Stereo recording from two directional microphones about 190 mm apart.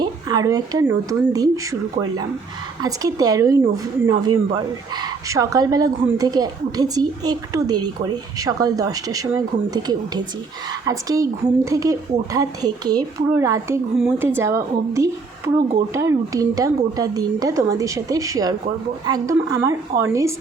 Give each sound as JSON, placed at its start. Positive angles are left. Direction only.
{"t": 0.0, "sound": "speech", "side_deg": -20}
{"t": 2.8, "sound": "a woman's voice", "side_deg": -20}